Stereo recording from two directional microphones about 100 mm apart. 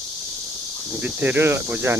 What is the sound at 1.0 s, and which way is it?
Speech, 20° right (ahead or behind).